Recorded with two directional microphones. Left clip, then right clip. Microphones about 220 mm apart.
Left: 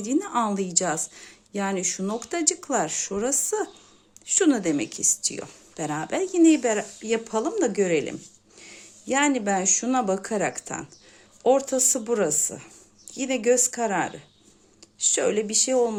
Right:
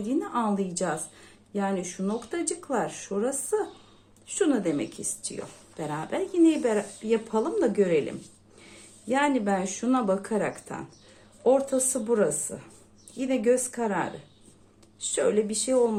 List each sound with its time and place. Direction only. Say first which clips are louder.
0.0 s a woman's voice: left 3 dB; 45° left (ahead or behind)